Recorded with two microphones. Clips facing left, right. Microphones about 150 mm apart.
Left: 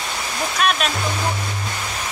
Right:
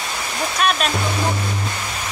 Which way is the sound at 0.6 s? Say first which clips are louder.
Right 1 dB; centre (ahead or behind).